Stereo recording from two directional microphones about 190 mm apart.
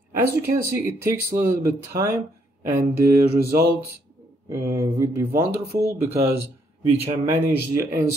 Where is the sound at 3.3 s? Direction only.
55° right (ahead or behind).